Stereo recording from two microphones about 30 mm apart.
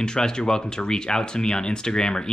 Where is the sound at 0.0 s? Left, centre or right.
Left.